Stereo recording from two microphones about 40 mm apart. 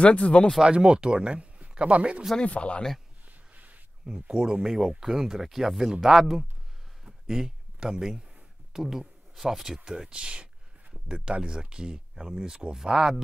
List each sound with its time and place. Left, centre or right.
0.0 s speech: left
0.7 s speech: right
2.4 s speech: left
3.5 s a sound: right
4.0 s speech: centre
9.8 s a sound: centre
11.3 s speech: right